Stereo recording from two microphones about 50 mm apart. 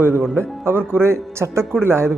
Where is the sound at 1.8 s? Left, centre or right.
Right.